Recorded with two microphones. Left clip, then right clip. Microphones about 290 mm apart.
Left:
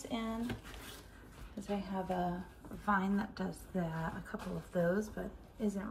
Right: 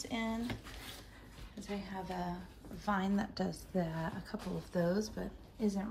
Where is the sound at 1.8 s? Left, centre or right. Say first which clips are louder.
Left 4 dB; centre.